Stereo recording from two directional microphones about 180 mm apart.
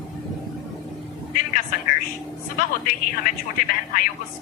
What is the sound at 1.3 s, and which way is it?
A woman's voice, 50° left (ahead or behind).